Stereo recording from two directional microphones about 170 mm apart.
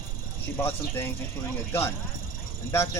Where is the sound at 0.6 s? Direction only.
15° left (ahead or behind).